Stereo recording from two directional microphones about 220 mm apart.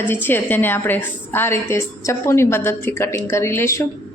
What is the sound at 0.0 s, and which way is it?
A woman's voice, 10° left (ahead or behind).